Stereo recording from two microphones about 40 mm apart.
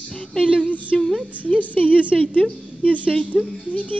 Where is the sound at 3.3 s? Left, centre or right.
Centre.